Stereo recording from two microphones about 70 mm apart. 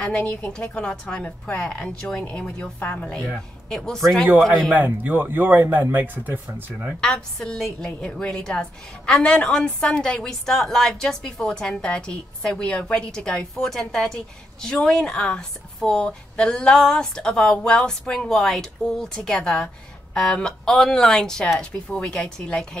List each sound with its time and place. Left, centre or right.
0.0 s a woman's voice: centre
3.3 s a man's voice: centre
4.7 s speech: right
7.0 s a woman's voice: centre